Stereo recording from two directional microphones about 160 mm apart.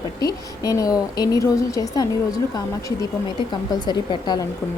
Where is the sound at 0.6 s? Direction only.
20° left (ahead or behind).